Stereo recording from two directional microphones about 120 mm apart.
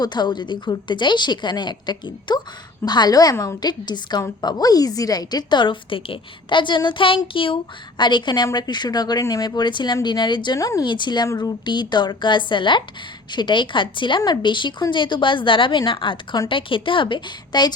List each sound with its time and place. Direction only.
0.0 s a woman's voice: 35° left (ahead or behind)
10.8 s a woman's voice: 40° left (ahead or behind)